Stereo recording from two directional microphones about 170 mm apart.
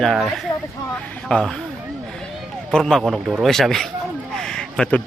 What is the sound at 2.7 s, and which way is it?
Speech, 5° left (ahead or behind).